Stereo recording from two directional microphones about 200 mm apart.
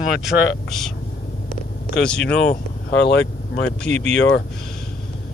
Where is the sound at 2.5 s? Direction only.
55° left (ahead or behind).